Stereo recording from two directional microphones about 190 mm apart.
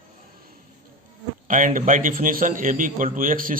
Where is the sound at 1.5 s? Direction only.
45° right (ahead or behind).